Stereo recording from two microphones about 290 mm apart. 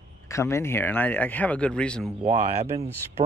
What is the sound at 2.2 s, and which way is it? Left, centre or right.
Speech, right.